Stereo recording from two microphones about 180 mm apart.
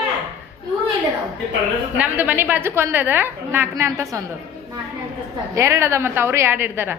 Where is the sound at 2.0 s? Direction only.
10° right (ahead or behind).